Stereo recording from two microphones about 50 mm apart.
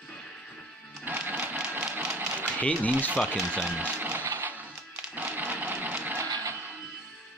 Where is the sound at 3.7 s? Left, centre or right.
Right.